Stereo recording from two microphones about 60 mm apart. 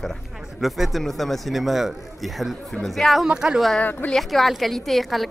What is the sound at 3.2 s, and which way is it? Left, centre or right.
Speech, centre.